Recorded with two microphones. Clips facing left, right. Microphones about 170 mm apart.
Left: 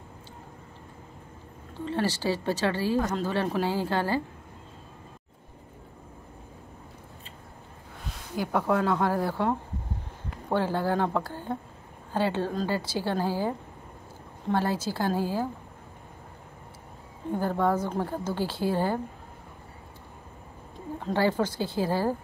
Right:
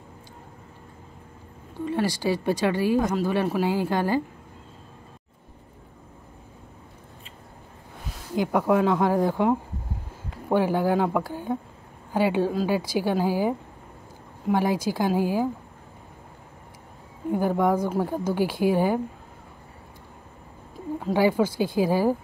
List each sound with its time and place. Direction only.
1.9 s a woman's voice: 10° right (ahead or behind)
8.4 s a woman's voice: 10° right (ahead or behind)
17.3 s a woman's voice: 10° right (ahead or behind)
21.0 s a woman's voice: 10° right (ahead or behind)